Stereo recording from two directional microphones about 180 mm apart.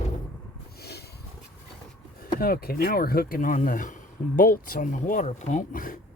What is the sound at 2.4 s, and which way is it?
Speech, 55° left (ahead or behind).